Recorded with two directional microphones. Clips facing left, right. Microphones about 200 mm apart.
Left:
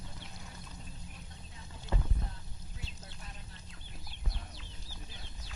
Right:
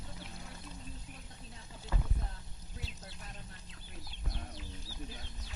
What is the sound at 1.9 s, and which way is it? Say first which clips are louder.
Rowboat: left 3 dB; 25° left (ahead or behind).